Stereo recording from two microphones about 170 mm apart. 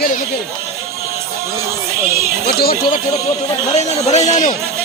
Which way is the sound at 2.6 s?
60° left (ahead or behind).